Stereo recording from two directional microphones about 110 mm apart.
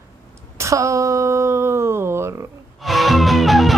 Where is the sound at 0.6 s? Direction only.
30° right (ahead or behind).